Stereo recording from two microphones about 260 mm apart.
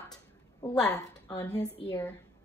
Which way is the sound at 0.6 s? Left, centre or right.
Centre.